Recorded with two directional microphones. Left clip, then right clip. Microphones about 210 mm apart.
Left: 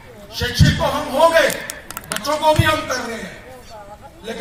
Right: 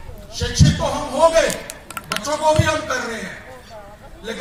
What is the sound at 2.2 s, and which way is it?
Speech, centre (ahead or behind).